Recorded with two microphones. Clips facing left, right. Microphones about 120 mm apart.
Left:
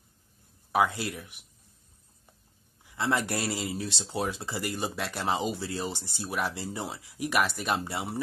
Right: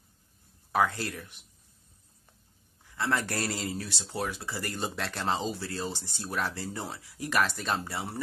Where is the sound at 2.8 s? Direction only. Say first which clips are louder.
Left 2 dB; 15° left (ahead or behind).